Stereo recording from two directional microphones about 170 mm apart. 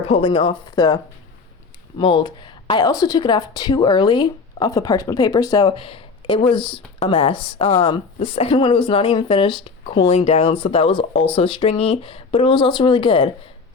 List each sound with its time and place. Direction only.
0.1 s speech: 30° left (ahead or behind)
2.0 s speech: 30° left (ahead or behind)